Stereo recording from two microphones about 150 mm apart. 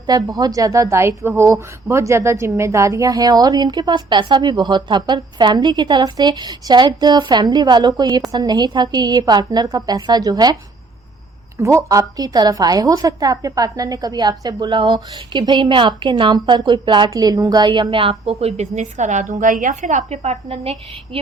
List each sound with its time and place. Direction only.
0.1 s a woman's voice: 25° right (ahead or behind)
11.6 s a woman's voice: 20° right (ahead or behind); by 21.2 s 45° right (ahead or behind)